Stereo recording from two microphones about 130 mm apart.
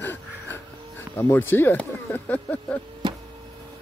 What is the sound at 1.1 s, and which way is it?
Speech, 15° left (ahead or behind).